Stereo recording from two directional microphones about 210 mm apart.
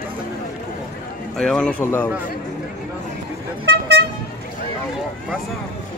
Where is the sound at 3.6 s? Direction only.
55° right (ahead or behind).